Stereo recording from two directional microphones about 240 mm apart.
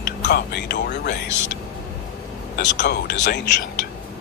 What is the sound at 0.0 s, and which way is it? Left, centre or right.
Speech, left.